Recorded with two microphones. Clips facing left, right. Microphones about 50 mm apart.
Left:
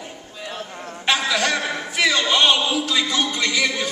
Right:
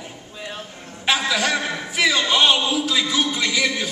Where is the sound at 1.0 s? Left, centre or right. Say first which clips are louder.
Even; centre.